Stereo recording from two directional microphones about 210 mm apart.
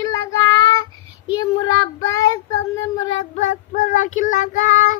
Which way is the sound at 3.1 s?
30° left (ahead or behind).